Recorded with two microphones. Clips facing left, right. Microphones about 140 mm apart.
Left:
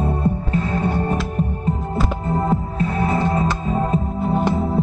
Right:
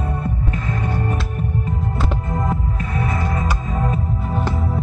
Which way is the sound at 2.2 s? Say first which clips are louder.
Left 3 dB; 30° left (ahead or behind).